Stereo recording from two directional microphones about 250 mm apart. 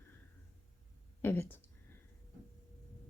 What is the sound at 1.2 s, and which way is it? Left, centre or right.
Speech, centre.